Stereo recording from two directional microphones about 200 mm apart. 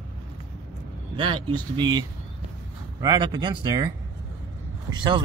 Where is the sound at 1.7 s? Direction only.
20° right (ahead or behind).